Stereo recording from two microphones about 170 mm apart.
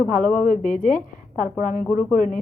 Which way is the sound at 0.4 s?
55° left (ahead or behind).